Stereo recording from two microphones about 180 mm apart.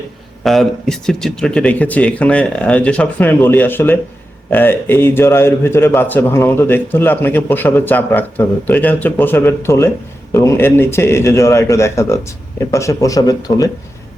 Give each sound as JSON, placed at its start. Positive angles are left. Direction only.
{"t": 0.4, "sound": "a man's voice", "side_deg": 0}